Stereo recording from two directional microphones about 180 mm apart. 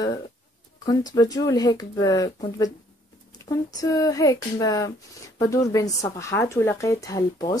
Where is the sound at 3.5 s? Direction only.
20° left (ahead or behind).